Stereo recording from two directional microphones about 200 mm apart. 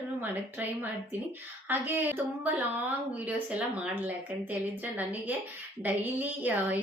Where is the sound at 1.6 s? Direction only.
10° right (ahead or behind).